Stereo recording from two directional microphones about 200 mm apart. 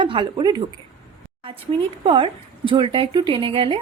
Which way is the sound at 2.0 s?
25° right (ahead or behind).